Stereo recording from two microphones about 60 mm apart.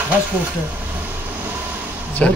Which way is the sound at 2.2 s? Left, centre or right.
Centre.